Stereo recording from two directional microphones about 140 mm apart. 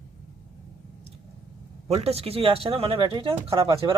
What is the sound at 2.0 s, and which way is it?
A man's voice, 45° right (ahead or behind).